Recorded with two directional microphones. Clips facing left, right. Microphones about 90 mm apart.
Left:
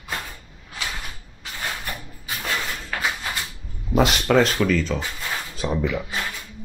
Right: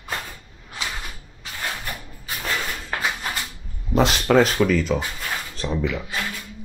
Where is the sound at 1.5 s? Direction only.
5° right (ahead or behind).